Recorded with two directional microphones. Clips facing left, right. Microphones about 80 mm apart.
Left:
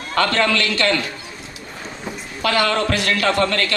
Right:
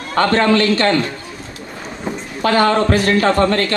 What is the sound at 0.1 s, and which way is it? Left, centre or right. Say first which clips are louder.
Speech: right 5 dB; right.